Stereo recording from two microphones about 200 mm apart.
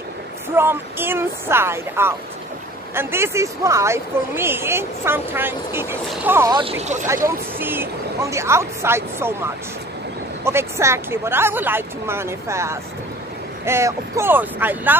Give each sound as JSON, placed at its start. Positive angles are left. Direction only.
{"t": 0.6, "sound": "speech", "side_deg": -10}
{"t": 6.5, "sound": "speech", "side_deg": -30}
{"t": 7.2, "sound": "speech", "side_deg": -10}
{"t": 10.4, "sound": "speech", "side_deg": -15}